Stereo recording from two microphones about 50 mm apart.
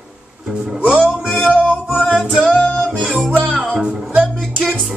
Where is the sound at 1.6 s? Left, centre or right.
Left.